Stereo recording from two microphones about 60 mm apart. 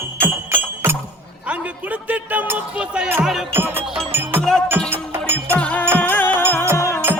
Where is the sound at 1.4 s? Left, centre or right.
Right.